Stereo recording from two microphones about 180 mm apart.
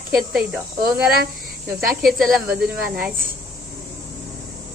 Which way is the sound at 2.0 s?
Centre (ahead or behind).